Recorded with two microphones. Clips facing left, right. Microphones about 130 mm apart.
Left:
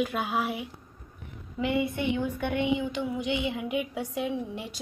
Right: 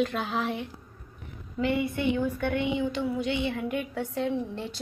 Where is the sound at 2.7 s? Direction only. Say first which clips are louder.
Right 2 dB; 15° left (ahead or behind).